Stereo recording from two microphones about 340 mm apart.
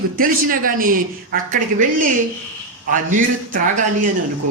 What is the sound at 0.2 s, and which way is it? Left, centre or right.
Speech, right.